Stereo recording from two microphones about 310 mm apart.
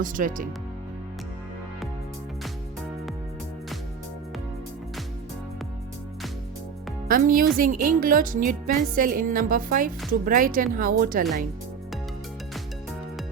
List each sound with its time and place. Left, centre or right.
0.0 s a woman's voice: right
7.1 s a woman's voice: right